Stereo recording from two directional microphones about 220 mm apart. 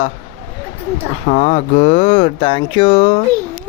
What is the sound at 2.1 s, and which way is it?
Speech, 25° left (ahead or behind).